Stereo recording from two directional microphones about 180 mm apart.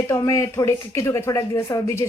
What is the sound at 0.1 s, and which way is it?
Speech, 15° left (ahead or behind).